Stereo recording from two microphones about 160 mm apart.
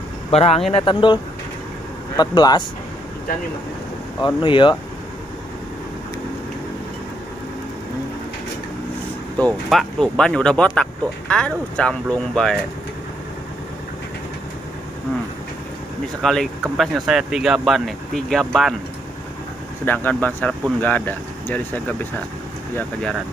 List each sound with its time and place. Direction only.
0.3 s speech: 40° left (ahead or behind)
4.4 s speech: 30° left (ahead or behind)
9.4 s speech: centre (ahead or behind)
16.2 s speech: 5° left (ahead or behind)
19.8 s speech: 10° left (ahead or behind)